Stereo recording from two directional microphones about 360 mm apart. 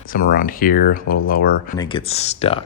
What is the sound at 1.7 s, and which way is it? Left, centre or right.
Speech, centre.